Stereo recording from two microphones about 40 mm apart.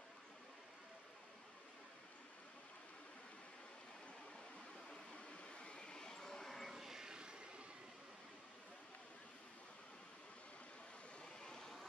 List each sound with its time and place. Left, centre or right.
5.1 s vehicle: left; by 6.7 s centre
6.7 s vehicle: centre
11.4 s vehicle: centre